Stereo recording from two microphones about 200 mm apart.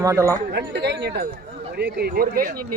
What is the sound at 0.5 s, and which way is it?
A man's voice, 55° right (ahead or behind).